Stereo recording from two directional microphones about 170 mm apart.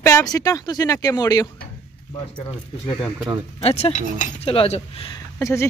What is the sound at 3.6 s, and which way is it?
Speech, 35° left (ahead or behind).